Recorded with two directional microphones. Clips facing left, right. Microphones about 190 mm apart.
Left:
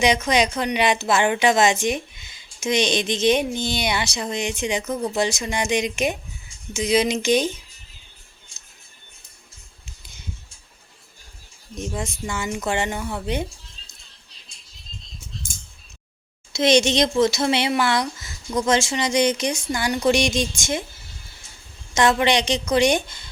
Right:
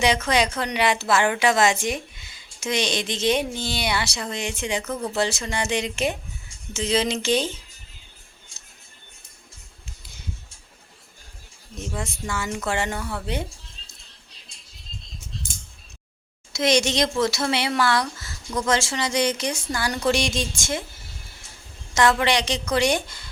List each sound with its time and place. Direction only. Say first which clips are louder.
0.0 s speech: left 2 dB; 20° left (ahead or behind)
11.7 s speech: left 3 dB; 20° left (ahead or behind)
16.5 s speech: left 3 dB; 25° left (ahead or behind)
21.9 s speech: left 2 dB; 20° left (ahead or behind)